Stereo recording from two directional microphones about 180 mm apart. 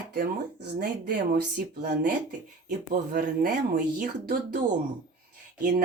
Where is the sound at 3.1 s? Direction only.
50° right (ahead or behind).